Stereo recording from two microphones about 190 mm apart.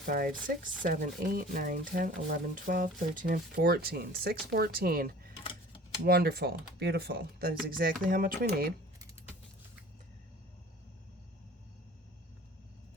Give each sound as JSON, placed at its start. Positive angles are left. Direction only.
{"t": 0.0, "sound": "speech", "side_deg": -45}
{"t": 5.4, "sound": "typewriter", "side_deg": 25}
{"t": 6.1, "sound": "speech", "side_deg": -55}